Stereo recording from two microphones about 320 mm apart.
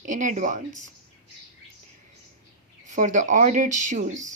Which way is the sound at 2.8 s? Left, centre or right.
Right.